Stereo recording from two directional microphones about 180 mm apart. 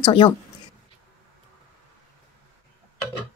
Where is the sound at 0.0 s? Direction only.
30° left (ahead or behind).